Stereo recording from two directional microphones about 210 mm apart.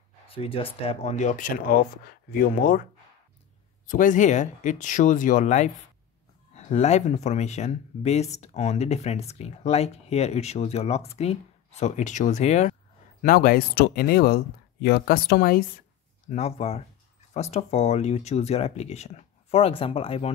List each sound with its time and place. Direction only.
0.3 s speech: 25° left (ahead or behind)
13.2 s speech: 45° left (ahead or behind)
16.3 s speech: 30° left (ahead or behind)